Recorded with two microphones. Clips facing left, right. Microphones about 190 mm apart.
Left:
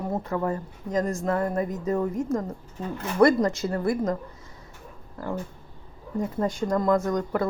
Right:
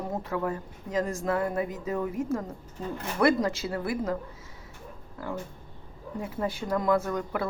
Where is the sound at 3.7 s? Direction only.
5° right (ahead or behind).